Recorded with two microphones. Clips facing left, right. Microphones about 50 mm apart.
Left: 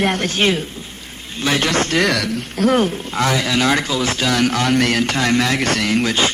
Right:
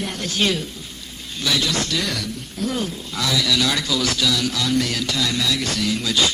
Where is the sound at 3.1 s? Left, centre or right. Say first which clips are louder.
Left 2 dB; left.